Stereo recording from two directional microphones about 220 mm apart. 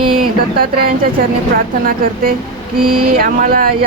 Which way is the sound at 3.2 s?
40° right (ahead or behind).